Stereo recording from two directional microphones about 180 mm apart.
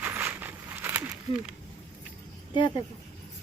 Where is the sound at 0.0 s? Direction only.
10° right (ahead or behind).